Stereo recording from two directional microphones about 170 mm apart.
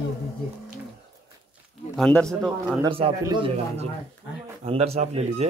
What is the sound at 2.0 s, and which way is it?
Speech, 5° left (ahead or behind).